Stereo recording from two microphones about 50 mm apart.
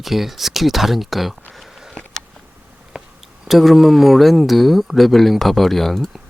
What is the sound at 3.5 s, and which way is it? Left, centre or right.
Speech, centre.